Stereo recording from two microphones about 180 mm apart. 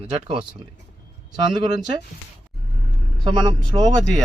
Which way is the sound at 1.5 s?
25° right (ahead or behind).